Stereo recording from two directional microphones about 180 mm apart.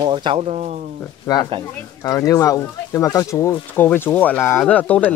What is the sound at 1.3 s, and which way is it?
Speech, 20° left (ahead or behind).